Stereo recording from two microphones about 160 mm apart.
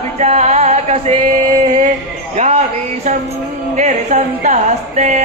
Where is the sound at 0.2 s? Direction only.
40° right (ahead or behind).